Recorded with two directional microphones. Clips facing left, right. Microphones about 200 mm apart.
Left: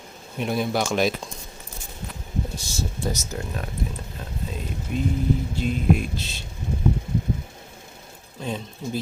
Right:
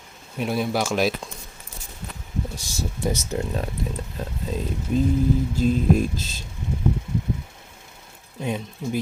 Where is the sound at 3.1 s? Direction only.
30° right (ahead or behind).